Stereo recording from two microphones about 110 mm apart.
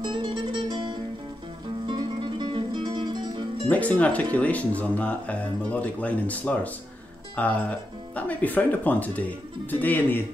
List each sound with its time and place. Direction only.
0.0 s music: 50° right (ahead or behind)
3.6 s speech: 15° left (ahead or behind)